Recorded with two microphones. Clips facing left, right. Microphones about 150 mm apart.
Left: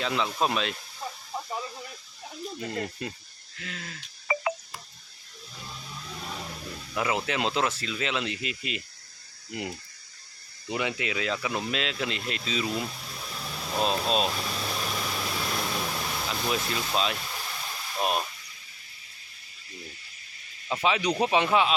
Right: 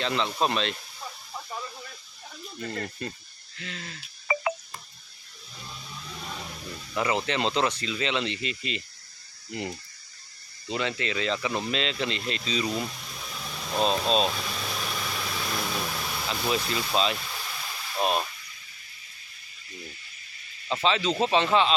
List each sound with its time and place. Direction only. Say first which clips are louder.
0.0 s speech: right 1 dB; 5° left (ahead or behind)
1.3 s a sound: left 3 dB; 20° left (ahead or behind)
2.6 s speech: right 1 dB; 15° left (ahead or behind)
3.6 s speech: even; centre (ahead or behind)
6.1 s a sound: left 1 dB; centre (ahead or behind)
6.9 s speech: right 1 dB; 5° left (ahead or behind)
20.7 s speech: even; 10° left (ahead or behind)